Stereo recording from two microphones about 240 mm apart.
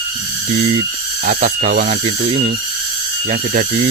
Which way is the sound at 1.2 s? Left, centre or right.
Right.